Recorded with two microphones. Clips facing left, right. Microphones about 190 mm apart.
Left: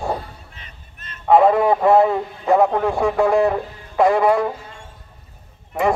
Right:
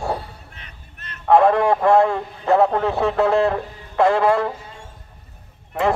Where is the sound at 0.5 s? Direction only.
60° right (ahead or behind).